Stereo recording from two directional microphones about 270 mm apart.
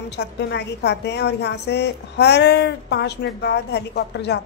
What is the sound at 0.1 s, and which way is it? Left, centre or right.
A woman's voice, left.